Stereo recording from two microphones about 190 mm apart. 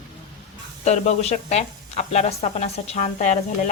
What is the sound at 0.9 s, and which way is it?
Speech, 35° left (ahead or behind).